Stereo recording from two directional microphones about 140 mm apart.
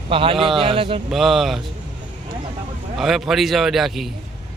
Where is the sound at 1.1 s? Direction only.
Centre (ahead or behind).